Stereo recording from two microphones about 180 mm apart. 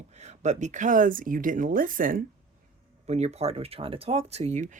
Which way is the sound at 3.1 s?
35° right (ahead or behind).